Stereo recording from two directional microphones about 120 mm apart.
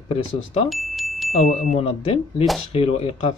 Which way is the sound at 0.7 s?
Centre (ahead or behind).